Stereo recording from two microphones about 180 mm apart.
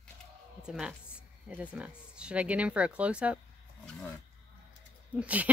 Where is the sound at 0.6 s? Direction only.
5° right (ahead or behind).